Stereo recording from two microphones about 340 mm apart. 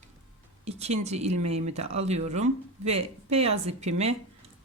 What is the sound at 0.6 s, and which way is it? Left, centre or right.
Speech, centre.